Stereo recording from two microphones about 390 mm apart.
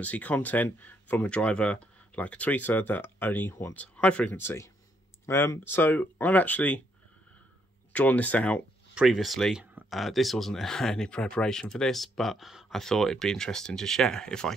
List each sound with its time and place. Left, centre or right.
0.0 s speech: centre
7.9 s speech: centre